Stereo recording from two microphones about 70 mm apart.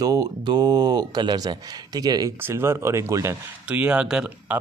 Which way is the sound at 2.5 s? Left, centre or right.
Right.